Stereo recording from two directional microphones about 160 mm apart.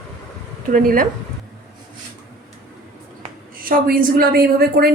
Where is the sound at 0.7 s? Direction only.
60° right (ahead or behind).